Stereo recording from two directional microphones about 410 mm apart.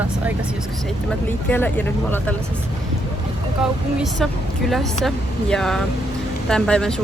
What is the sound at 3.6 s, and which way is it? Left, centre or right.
Speech, centre.